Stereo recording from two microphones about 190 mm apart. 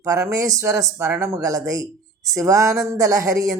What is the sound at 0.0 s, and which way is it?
Speech, 15° right (ahead or behind).